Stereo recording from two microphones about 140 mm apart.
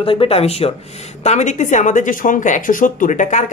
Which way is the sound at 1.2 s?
55° left (ahead or behind).